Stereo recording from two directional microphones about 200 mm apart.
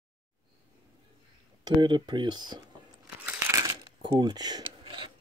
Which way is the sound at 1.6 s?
20° right (ahead or behind).